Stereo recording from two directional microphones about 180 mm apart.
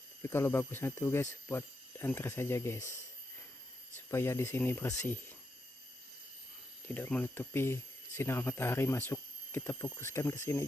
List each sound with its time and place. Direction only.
0.2 s speech: 15° left (ahead or behind)
3.9 s speech: 15° left (ahead or behind)
6.8 s speech: 10° left (ahead or behind)